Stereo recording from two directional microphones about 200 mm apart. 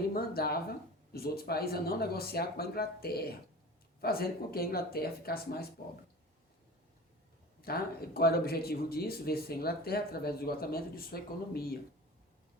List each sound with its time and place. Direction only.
0.1 s speech: 50° left (ahead or behind)
7.6 s speech: 50° left (ahead or behind)